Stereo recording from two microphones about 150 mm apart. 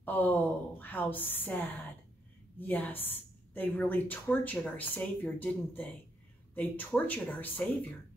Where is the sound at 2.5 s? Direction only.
10° left (ahead or behind).